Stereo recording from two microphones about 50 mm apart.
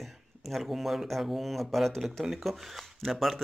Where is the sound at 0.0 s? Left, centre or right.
Centre.